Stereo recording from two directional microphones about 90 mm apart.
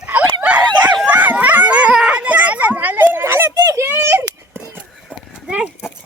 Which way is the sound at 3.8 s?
25° right (ahead or behind).